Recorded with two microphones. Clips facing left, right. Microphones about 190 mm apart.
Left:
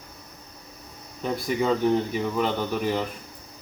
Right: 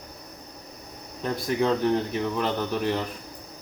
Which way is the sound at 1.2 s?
Centre (ahead or behind).